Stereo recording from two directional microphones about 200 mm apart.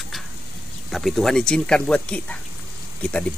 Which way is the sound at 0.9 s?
Centre (ahead or behind).